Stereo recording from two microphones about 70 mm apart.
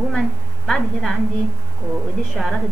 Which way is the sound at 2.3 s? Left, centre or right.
Centre.